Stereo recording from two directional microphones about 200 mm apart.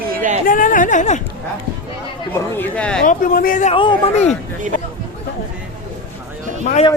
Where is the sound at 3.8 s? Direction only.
25° left (ahead or behind).